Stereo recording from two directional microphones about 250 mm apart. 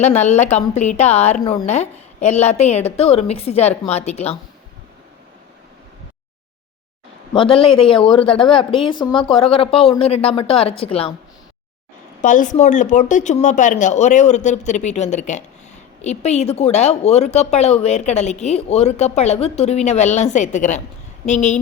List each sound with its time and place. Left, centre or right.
0.0 s speech: left
7.3 s speech: left
12.2 s speech: left